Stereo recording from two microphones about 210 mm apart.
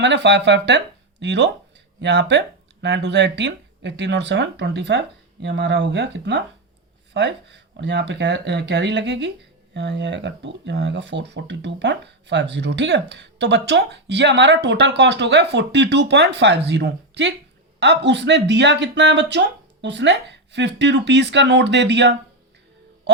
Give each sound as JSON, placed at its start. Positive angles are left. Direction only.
{"t": 0.0, "sound": "speech", "side_deg": -55}